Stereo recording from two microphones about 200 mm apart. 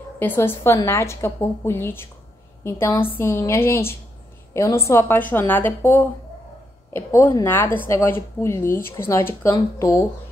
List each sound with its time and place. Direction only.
0.2 s a woman's voice: 10° left (ahead or behind)